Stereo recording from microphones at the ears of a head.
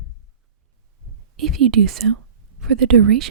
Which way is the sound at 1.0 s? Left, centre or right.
Right.